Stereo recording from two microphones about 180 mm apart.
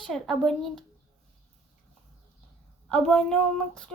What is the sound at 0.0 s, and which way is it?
Speech, centre (ahead or behind).